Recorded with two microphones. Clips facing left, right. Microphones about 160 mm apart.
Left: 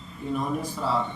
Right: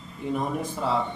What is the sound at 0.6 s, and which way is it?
Speech, 20° right (ahead or behind).